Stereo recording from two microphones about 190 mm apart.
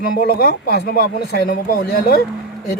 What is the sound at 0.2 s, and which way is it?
Speech, 55° left (ahead or behind).